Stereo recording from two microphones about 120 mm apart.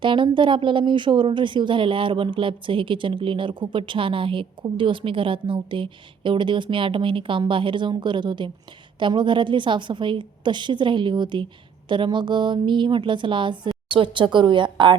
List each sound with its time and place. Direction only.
0.0 s a woman's voice: 45° right (ahead or behind)